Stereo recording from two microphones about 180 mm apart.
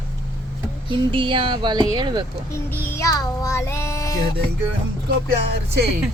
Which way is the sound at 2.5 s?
10° left (ahead or behind).